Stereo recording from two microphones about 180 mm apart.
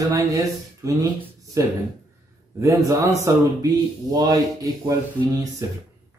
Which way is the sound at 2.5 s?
20° right (ahead or behind).